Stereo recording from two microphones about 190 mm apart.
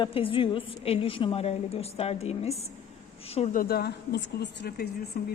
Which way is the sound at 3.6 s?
55° left (ahead or behind).